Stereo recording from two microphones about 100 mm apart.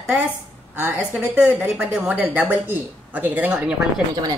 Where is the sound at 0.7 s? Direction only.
15° right (ahead or behind).